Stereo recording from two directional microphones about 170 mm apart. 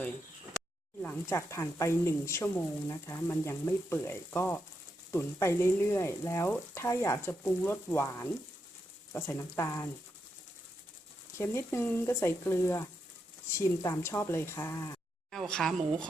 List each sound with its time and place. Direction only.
1.0 s speech: 15° left (ahead or behind)
11.3 s speech: 15° left (ahead or behind)
15.3 s speech: 5° left (ahead or behind)